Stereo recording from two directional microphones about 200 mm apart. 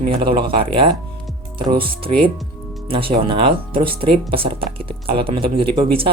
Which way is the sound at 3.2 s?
25° right (ahead or behind).